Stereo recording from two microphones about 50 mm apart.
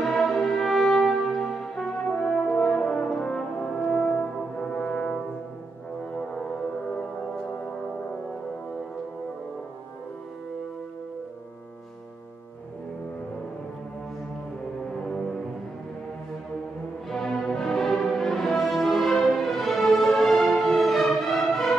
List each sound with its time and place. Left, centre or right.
0.0 s music: centre
2.1 s brass instrument: centre
3.8 s french horn: left
6.1 s music: centre
14.9 s music: centre
17.1 s music: centre